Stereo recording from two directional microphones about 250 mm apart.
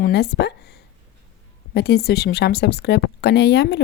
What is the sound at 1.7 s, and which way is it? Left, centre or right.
Speech, left.